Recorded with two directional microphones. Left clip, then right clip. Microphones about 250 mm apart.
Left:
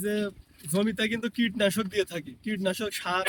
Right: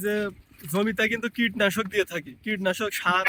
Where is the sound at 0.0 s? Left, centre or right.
Centre.